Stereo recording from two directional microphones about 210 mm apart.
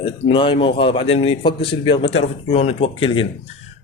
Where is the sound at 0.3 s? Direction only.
25° left (ahead or behind).